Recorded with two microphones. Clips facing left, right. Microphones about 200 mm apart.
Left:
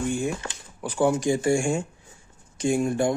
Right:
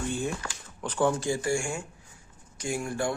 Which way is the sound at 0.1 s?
15° left (ahead or behind).